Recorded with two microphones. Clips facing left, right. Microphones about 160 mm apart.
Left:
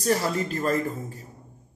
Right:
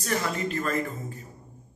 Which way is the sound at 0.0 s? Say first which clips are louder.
Left 4 dB; 35° left (ahead or behind).